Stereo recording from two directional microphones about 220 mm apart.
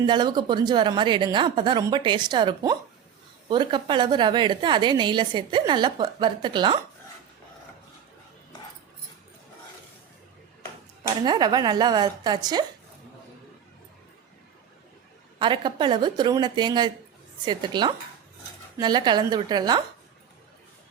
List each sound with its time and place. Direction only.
0.0 s a woman's voice: 20° right (ahead or behind)
11.3 s a woman's voice: 20° right (ahead or behind)
15.4 s a woman's voice: 20° right (ahead or behind)